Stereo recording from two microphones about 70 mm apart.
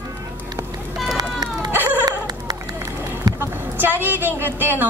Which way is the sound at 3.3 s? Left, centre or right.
Right.